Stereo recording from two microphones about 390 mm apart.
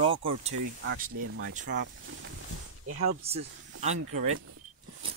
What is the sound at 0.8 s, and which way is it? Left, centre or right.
Speech, right.